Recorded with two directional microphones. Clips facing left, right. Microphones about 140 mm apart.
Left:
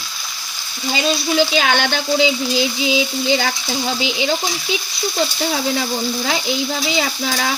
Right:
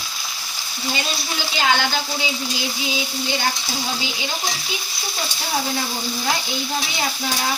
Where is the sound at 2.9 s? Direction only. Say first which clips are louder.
Left 9 dB; 90° left.